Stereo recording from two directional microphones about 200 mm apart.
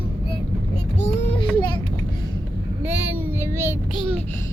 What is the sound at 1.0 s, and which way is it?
Child singing, 25° left (ahead or behind).